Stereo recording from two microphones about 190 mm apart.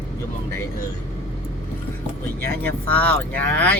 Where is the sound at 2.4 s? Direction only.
10° left (ahead or behind).